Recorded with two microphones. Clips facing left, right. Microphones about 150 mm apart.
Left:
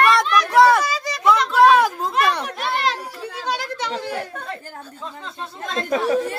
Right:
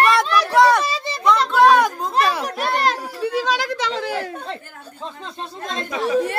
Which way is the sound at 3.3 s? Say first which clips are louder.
Right 4 dB; 90° right.